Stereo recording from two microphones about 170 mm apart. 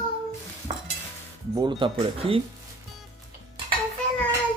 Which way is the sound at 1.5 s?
25° right (ahead or behind).